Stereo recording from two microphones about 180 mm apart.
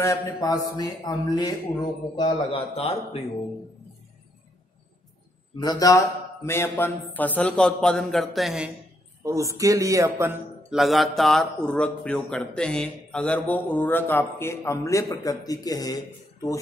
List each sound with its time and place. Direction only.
0.0 s speech: 15° left (ahead or behind)
5.6 s speech: 20° left (ahead or behind); by 8.6 s centre (ahead or behind)
9.2 s speech: 15° right (ahead or behind)
10.7 s speech: centre (ahead or behind); by 16.0 s 20° left (ahead or behind)